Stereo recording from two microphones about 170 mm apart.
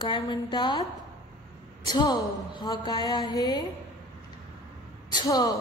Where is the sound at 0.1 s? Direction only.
25° left (ahead or behind).